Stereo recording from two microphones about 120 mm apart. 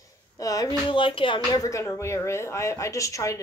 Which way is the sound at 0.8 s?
45° left (ahead or behind).